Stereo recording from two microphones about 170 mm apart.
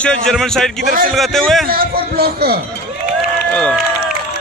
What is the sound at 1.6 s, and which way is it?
Speech, 60° right (ahead or behind).